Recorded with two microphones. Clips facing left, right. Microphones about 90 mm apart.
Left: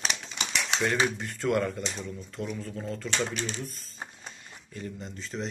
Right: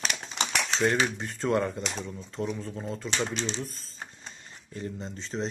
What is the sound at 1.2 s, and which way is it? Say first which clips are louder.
Speech: even; 20° right (ahead or behind).